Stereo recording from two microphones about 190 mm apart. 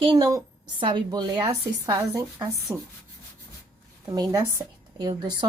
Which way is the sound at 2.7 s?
5° right (ahead or behind).